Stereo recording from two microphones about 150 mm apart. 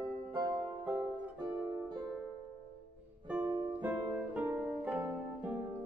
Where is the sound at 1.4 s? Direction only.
30° right (ahead or behind).